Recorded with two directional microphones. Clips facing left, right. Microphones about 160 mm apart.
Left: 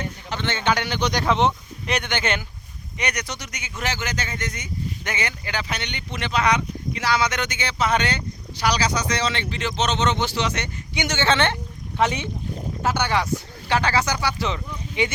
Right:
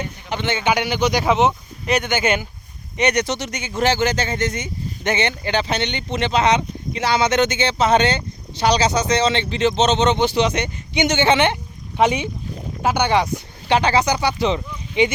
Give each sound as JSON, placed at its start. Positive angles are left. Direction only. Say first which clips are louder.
{"t": 0.3, "sound": "speech", "louder": "right 3 dB", "side_deg": -10}
{"t": 3.0, "sound": "speech", "louder": "right 10 dB", "side_deg": -25}